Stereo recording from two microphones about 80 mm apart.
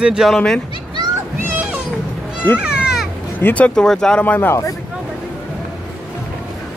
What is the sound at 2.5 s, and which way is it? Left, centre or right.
Goat, centre.